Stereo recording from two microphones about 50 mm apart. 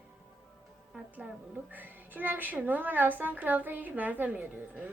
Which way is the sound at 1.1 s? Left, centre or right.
Right.